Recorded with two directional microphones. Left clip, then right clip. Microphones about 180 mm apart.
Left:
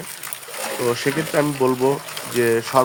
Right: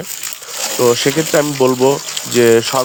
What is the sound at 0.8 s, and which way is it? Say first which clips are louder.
Speech: right 9 dB; 50° right (ahead or behind).